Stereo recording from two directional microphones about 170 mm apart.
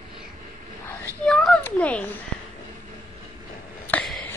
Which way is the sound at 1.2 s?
5° left (ahead or behind).